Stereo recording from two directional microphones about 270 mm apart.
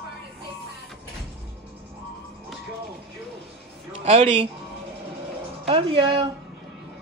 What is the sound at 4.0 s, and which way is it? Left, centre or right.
Speech, right.